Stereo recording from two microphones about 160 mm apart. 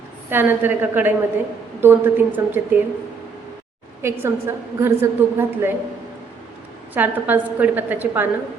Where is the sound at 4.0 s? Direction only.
15° right (ahead or behind).